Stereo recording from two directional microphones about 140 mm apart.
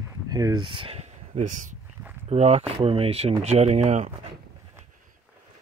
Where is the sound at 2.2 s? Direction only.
50° right (ahead or behind).